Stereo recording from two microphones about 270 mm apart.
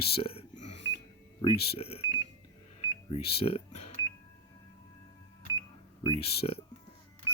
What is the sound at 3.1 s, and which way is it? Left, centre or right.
Speech, left.